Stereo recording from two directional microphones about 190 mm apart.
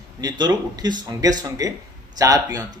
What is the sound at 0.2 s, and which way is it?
Speech, 20° right (ahead or behind).